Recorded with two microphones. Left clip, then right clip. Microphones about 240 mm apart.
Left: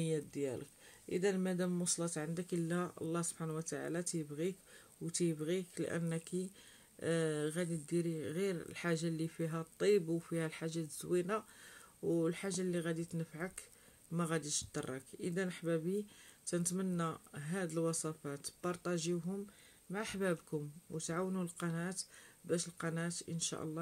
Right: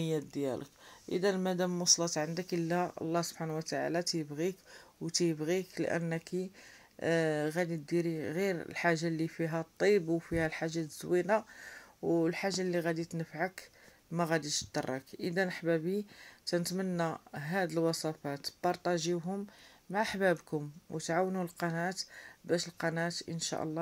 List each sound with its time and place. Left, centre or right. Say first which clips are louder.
0.0 s speech: right 4 dB; centre
14.4 s speech: right 5 dB; left
14.7 s speech: right 7 dB; centre